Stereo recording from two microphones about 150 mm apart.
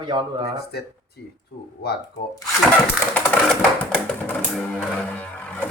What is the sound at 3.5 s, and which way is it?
Music, 5° left (ahead or behind).